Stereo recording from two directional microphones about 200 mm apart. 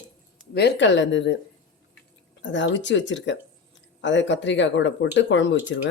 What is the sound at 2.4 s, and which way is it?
Speech, 65° left (ahead or behind).